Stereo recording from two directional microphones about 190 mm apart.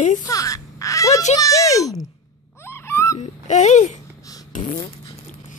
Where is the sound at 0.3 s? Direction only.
15° left (ahead or behind).